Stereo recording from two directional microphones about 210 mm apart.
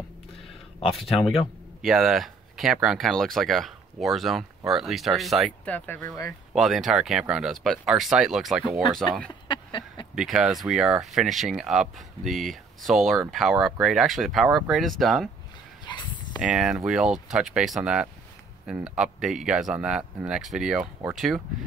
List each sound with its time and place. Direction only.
0.9 s speech: centre (ahead or behind)
6.5 s speech: centre (ahead or behind)
9.3 s a sound: 20° left (ahead or behind)
10.1 s speech: centre (ahead or behind)
15.8 s a sound: 20° left (ahead or behind)
16.3 s speech: 5° right (ahead or behind)